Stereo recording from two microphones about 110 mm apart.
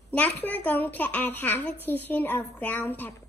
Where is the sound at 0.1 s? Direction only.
15° left (ahead or behind).